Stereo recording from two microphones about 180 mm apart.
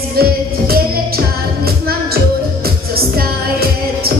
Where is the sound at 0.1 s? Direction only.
55° right (ahead or behind).